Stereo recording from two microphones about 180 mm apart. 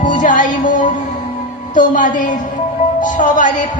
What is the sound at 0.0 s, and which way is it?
Music, 45° left (ahead or behind).